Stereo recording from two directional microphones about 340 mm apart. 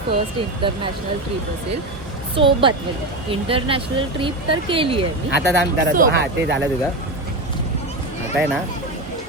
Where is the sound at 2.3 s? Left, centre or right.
Centre.